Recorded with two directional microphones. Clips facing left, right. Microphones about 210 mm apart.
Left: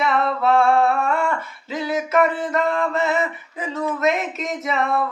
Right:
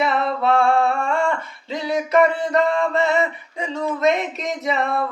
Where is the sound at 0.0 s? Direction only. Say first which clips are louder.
Even; centre (ahead or behind).